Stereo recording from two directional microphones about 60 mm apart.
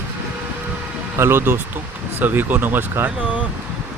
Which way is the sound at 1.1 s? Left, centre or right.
Right.